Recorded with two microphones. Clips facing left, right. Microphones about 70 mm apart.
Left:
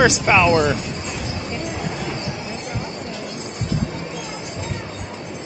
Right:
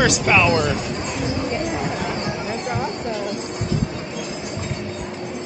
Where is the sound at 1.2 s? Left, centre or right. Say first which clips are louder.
Right 7 dB; right.